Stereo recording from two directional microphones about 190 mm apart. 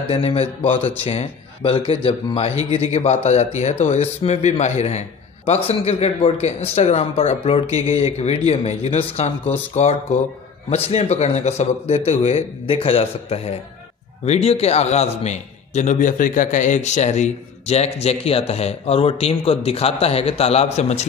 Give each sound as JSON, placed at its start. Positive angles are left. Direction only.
{"t": 0.1, "sound": "speech", "side_deg": 30}